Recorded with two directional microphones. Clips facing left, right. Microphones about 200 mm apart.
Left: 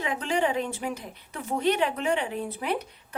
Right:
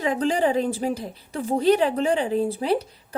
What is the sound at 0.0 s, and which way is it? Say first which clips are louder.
A woman's voice: right 5 dB; 35° right (ahead or behind).